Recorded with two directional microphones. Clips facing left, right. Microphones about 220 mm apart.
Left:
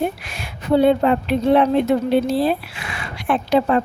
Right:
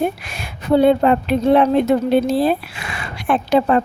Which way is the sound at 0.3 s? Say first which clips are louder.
Right 2 dB; 45° right (ahead or behind).